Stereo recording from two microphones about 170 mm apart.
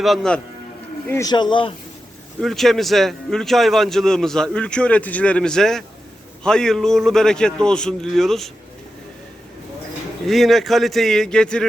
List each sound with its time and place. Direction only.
0.0 s a man's voice: centre (ahead or behind)
1.3 s speech: 25° left (ahead or behind)
2.4 s a man's voice: centre (ahead or behind)
10.2 s a man's voice: centre (ahead or behind)